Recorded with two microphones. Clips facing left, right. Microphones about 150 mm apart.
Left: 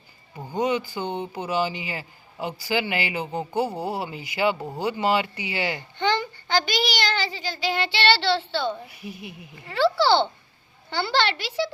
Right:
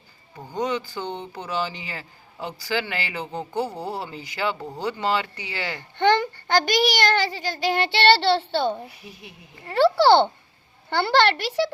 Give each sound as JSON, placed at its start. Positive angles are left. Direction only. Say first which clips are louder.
{"t": 0.3, "sound": "speech", "louder": "left 2 dB", "side_deg": 10}
{"t": 6.0, "sound": "a sound", "louder": "right 5 dB", "side_deg": -55}
{"t": 7.3, "sound": "a child's voice", "louder": "right 3 dB", "side_deg": -50}
{"t": 9.0, "sound": "speech", "louder": "left 6 dB", "side_deg": 10}
{"t": 9.6, "sound": "a child's voice", "louder": "right 4 dB", "side_deg": -55}